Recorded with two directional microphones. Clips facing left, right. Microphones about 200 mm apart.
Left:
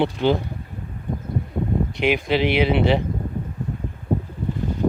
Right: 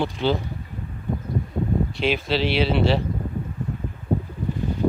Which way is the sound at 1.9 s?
15° left (ahead or behind).